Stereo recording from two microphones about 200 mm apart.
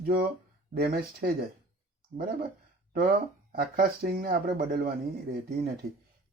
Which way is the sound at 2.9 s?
50° right (ahead or behind).